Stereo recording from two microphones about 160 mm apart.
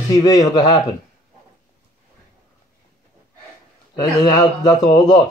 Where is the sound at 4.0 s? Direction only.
25° left (ahead or behind).